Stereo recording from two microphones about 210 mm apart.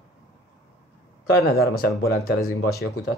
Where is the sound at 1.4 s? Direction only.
45° left (ahead or behind).